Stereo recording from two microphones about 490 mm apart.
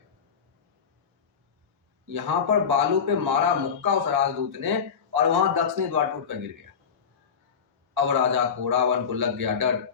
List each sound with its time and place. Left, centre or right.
2.0 s a man's voice: right
7.9 s a man's voice: right